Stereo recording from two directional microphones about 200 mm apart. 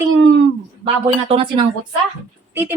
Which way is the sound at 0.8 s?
25° right (ahead or behind).